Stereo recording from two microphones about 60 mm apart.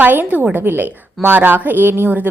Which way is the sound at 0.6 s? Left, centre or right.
Right.